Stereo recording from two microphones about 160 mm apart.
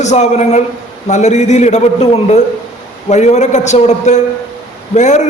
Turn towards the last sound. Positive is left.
turn(degrees=45)  # may be behind; listen again after turning